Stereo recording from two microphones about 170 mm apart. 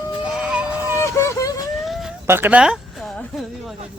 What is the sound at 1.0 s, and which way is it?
Vehicle, 15° left (ahead or behind).